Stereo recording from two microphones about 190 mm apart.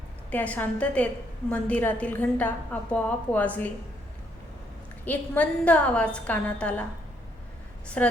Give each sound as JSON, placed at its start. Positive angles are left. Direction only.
{"t": 0.3, "sound": "a woman's voice", "side_deg": 10}
{"t": 5.0, "sound": "a woman's voice", "side_deg": 10}
{"t": 7.9, "sound": "a woman's voice", "side_deg": 5}